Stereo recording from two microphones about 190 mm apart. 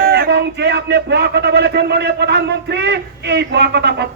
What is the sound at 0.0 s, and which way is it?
Speech, 55° right (ahead or behind).